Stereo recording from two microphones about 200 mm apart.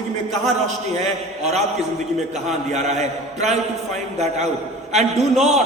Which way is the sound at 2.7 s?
35° right (ahead or behind).